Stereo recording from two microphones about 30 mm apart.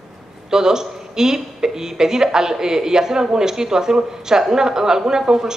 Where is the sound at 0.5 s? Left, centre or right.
Centre.